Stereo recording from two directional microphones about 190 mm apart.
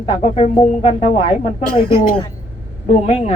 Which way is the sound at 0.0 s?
35° left (ahead or behind).